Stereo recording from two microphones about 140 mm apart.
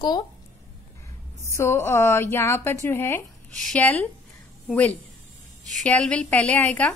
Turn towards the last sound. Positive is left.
turn(degrees=10)  # may be behind; listen again after turning